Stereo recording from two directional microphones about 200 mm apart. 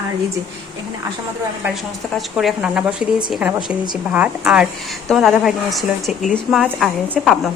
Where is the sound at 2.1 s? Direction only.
Centre (ahead or behind).